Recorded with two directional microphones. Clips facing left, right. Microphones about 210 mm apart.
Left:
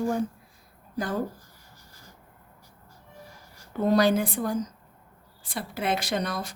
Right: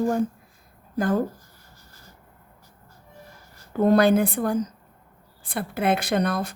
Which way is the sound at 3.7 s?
55° right (ahead or behind).